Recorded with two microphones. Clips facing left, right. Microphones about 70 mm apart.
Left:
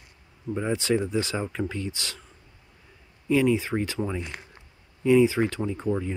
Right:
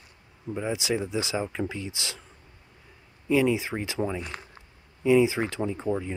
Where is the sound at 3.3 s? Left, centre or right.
Centre.